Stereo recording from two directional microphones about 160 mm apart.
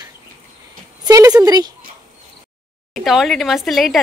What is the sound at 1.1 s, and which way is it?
Speech, 25° right (ahead or behind).